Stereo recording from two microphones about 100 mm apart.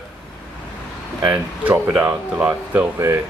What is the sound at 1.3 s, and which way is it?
Speech, 20° right (ahead or behind).